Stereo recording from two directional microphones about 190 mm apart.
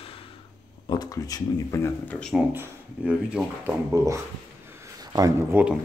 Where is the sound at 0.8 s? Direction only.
20° left (ahead or behind); by 2.4 s 5° left (ahead or behind).